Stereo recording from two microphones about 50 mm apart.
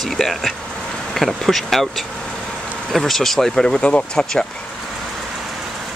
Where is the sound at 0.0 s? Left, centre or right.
Centre.